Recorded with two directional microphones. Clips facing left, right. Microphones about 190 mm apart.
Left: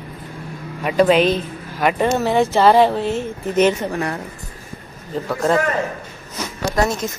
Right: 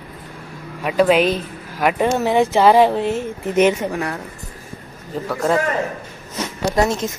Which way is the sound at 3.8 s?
Centre (ahead or behind).